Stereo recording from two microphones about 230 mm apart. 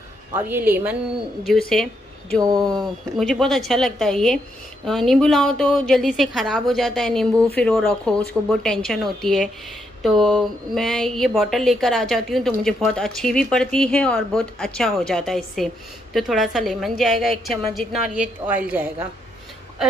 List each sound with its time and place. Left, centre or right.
0.3 s a woman's voice: centre
2.4 s a woman's voice: centre
2.7 s a woman's voice: centre
10.1 s speech: centre
10.7 s a woman's voice: centre